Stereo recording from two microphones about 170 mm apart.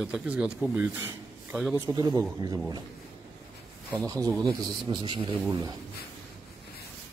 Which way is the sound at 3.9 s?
20° right (ahead or behind).